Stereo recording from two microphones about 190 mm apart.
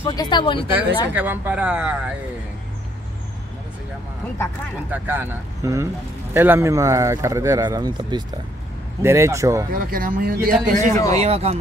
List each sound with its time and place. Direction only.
0.0 s speech: 20° left (ahead or behind)
1.1 s speech: 10° right (ahead or behind)
4.9 s speech: 10° right (ahead or behind)
9.8 s a man's voice: 50° right (ahead or behind)